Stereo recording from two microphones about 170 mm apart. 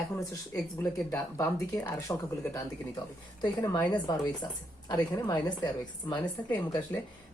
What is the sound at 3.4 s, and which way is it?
A woman's voice, 25° left (ahead or behind).